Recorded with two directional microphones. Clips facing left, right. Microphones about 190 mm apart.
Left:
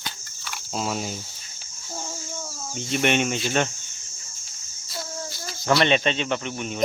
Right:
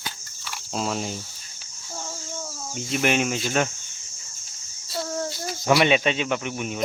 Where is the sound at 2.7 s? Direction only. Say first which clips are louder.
Even; centre (ahead or behind).